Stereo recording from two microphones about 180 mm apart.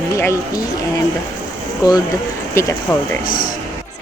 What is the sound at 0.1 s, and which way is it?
Speech, 15° left (ahead or behind).